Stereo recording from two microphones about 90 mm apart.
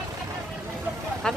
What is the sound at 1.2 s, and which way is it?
Speech, 5° left (ahead or behind).